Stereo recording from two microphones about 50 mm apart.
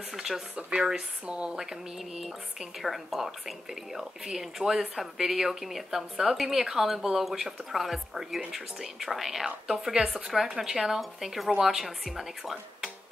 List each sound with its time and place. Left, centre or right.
0.1 s speech: centre
0.6 s speech: right
1.6 s a woman's voice: centre